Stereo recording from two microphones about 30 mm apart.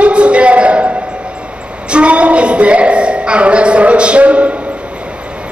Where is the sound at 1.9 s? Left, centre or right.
Right.